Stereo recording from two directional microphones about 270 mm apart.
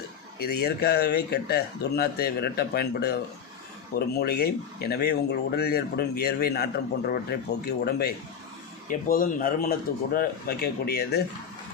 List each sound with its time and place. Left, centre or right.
0.3 s speech: left